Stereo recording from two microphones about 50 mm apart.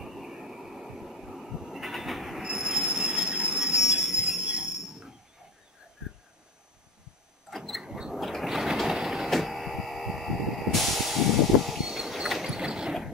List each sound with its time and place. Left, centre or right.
0.0 s vehicle: centre
2.4 s train: centre
2.9 s train wheels squealing: right
3.3 s train: right
7.5 s a sound: centre
8.5 s train: centre
8.8 s a sound: centre
11.6 s vehicle: centre